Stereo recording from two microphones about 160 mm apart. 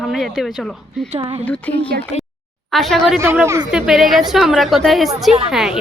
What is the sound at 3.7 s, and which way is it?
A woman's voice, 5° right (ahead or behind).